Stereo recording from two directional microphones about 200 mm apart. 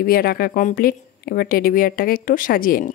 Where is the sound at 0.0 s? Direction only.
50° left (ahead or behind).